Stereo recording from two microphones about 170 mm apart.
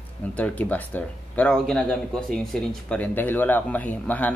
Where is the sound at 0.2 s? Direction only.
10° left (ahead or behind).